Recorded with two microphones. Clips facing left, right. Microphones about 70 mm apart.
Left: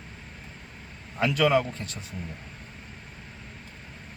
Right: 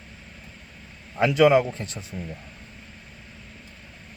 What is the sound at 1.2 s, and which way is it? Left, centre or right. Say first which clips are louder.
Speech: right 5 dB; right.